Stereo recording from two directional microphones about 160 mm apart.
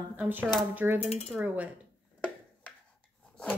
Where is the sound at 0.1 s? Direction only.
10° right (ahead or behind).